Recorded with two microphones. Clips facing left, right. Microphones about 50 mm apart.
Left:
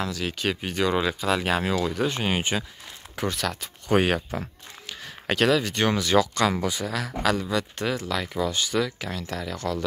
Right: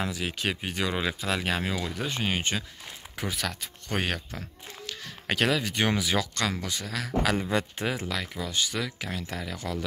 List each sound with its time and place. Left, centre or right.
0.0 s speech: centre
3.2 s speech: centre
3.9 s speech: centre
5.3 s speech: centre
6.1 s speech: centre
7.3 s speech: right
7.8 s speech: centre
8.1 s speech: centre